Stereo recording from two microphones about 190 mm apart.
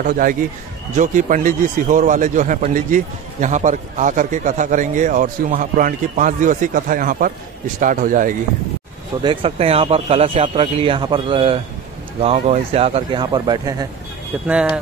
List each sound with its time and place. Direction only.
0.0 s a man's voice: 45° right (ahead or behind)
9.2 s speech: 25° right (ahead or behind)